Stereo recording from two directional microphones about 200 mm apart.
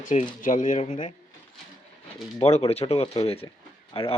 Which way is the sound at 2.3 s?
30° left (ahead or behind).